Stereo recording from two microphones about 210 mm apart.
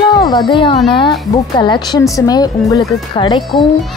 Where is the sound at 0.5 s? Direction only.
25° left (ahead or behind).